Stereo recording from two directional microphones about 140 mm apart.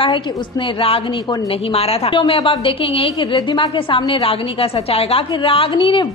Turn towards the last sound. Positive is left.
turn(degrees=35)  # may be behind; listen again after turning